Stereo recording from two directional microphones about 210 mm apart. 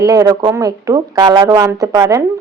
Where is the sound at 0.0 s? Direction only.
15° right (ahead or behind).